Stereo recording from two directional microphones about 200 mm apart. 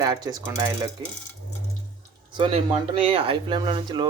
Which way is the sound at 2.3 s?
25° right (ahead or behind).